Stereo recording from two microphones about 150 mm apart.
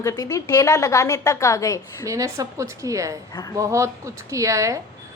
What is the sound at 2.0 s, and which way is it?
A woman's voice, 20° right (ahead or behind).